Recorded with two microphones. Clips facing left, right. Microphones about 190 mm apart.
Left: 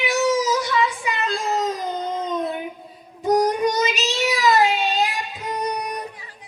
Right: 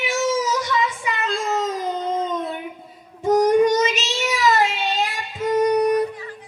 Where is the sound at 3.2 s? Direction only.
35° left (ahead or behind).